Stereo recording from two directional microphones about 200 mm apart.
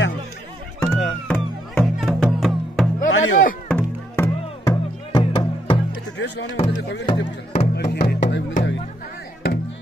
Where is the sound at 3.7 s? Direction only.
5° left (ahead or behind).